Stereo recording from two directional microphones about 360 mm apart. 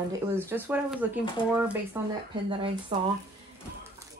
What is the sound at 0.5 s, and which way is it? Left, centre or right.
Speech, centre.